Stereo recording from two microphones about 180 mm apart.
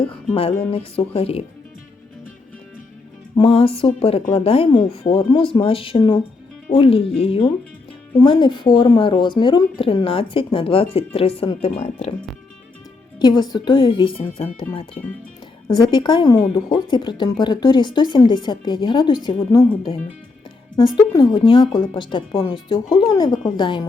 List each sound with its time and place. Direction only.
0.0 s music: 30° left (ahead or behind)
0.7 s speech: 30° left (ahead or behind)
3.3 s a woman's voice: 30° left (ahead or behind)
13.1 s a woman's voice: 25° left (ahead or behind)
21.1 s a woman's voice: 25° left (ahead or behind)